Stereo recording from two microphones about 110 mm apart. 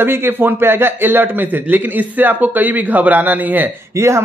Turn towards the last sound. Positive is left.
turn(degrees=-25)  # may be behind; listen again after turning